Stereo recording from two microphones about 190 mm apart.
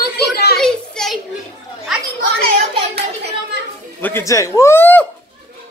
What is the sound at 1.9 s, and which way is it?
Children playing, centre (ahead or behind).